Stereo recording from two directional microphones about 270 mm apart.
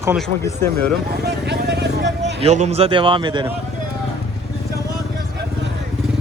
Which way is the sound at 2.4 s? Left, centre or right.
Right.